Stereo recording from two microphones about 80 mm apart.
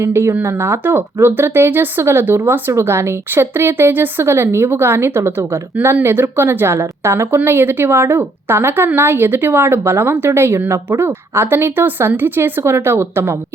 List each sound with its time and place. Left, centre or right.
0.0 s a woman's voice: right